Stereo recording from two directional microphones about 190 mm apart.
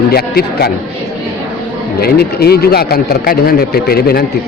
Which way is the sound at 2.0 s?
55° left (ahead or behind).